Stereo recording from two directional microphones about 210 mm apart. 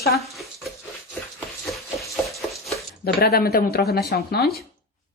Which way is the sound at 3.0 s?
45° left (ahead or behind).